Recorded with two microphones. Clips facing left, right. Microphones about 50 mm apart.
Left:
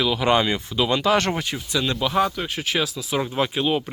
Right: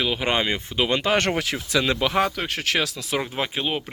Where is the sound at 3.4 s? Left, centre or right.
Right.